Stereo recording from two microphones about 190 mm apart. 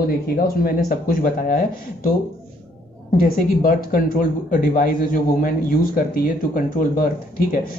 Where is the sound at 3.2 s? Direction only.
50° left (ahead or behind).